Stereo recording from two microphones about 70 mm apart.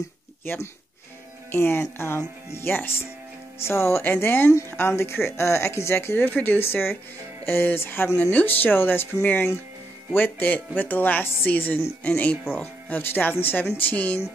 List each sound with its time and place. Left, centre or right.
1.5 s speech: left